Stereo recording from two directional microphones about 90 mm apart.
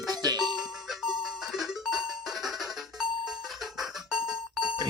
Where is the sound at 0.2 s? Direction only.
45° right (ahead or behind).